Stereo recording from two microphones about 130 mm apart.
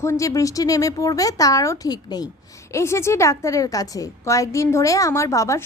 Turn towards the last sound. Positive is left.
turn(degrees=25)  # may be behind; listen again after turning